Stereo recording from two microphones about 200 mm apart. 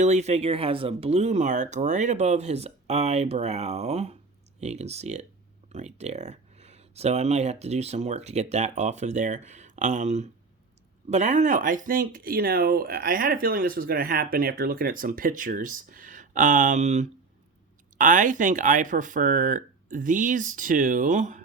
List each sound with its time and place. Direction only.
0.0 s speech: 35° right (ahead or behind)